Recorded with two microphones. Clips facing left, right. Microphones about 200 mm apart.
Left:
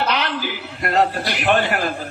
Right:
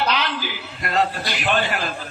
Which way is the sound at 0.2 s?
60° left (ahead or behind).